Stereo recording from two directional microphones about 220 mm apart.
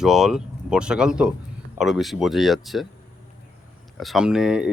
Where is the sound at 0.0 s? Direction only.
Centre (ahead or behind).